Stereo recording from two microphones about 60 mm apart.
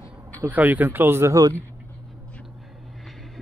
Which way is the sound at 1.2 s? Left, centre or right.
Right.